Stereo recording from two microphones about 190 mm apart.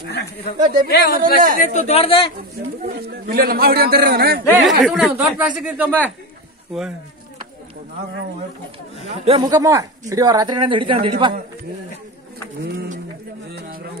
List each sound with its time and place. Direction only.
0.1 s a woman's voice: 60° left (ahead or behind)
1.2 s a man's voice: 45° right (ahead or behind)
1.6 s a man's voice: 40° left (ahead or behind)
2.8 s a man's voice: 55° right (ahead or behind)
4.6 s speech: centre (ahead or behind)
5.9 s speech: 10° left (ahead or behind)
9.0 s a woman's voice: 30° right (ahead or behind)
13.6 s a man's voice: 50° right (ahead or behind)